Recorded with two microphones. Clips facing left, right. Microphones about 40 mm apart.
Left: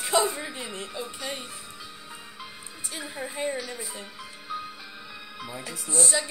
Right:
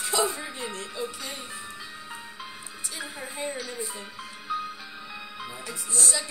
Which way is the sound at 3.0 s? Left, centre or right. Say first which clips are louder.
Left 4 dB; centre.